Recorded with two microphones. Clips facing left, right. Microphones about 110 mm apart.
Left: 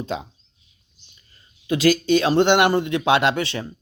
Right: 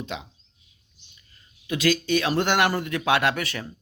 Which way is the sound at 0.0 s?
40° left (ahead or behind).